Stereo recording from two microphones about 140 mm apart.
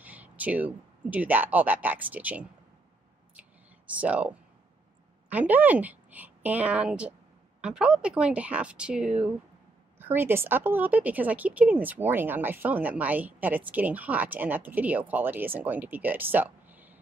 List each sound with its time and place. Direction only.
0.0 s speech: 10° right (ahead or behind)
3.9 s a woman's voice: 10° right (ahead or behind)